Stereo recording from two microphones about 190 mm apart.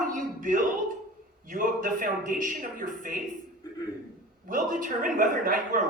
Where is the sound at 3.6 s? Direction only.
20° left (ahead or behind).